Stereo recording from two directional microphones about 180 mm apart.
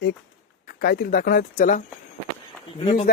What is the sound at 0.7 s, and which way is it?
Speech, 60° left (ahead or behind).